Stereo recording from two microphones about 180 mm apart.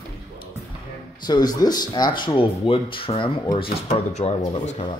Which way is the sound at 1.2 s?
20° left (ahead or behind).